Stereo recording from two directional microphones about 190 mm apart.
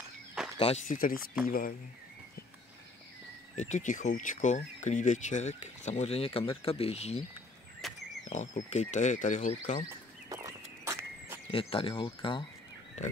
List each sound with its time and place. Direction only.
0.4 s a sound: 5° right (ahead or behind)
0.8 s speech: 45° left (ahead or behind)
3.5 s speech: 40° left (ahead or behind)
7.8 s frog: centre (ahead or behind)
8.3 s speech: 40° left (ahead or behind)
9.8 s horse: 15° right (ahead or behind)
11.5 s speech: 30° left (ahead or behind)